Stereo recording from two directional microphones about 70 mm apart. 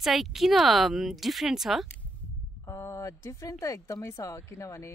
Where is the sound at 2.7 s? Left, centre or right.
Left.